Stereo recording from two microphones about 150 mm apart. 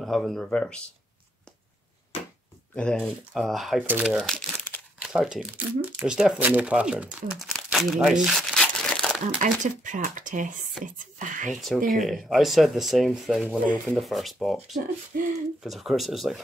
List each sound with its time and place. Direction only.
0.0 s speech: centre (ahead or behind)
2.7 s speech: 5° left (ahead or behind)
3.8 s speech: 10° right (ahead or behind)
4.1 s speech: centre (ahead or behind)
8.9 s crumpling: 5° left (ahead or behind)
9.4 s speech: 60° right (ahead or behind)
11.5 s speech: centre (ahead or behind)
15.1 s speech: 70° right (ahead or behind)
15.6 s speech: centre (ahead or behind)